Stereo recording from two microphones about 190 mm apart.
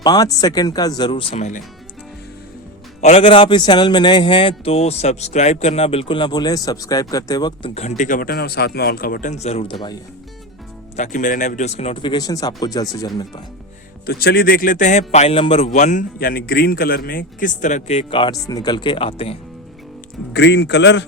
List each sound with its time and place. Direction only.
0.0 s a man's voice: 20° left (ahead or behind); by 1.6 s 35° left (ahead or behind)
3.0 s a man's voice: 30° left (ahead or behind)
7.7 s a man's voice: 35° left (ahead or behind)
10.9 s a man's voice: 40° left (ahead or behind); by 13.4 s 20° left (ahead or behind)
14.1 s a man's voice: 55° left (ahead or behind); by 19.4 s 30° left (ahead or behind)
20.3 s a man's voice: 65° left (ahead or behind)